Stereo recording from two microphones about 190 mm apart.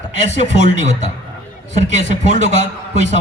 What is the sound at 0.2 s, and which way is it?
A man's voice, 40° right (ahead or behind).